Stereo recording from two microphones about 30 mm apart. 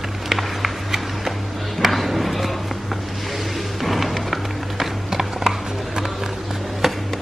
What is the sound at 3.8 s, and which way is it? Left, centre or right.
Music, centre.